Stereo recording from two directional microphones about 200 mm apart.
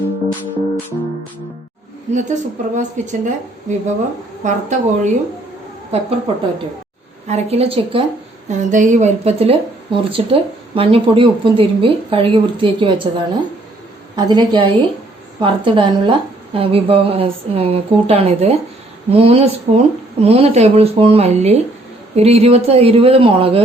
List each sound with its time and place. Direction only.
2.1 s speech: 35° right (ahead or behind)